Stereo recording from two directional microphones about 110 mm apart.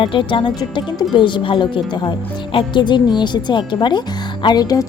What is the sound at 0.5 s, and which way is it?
A woman's voice, 40° left (ahead or behind).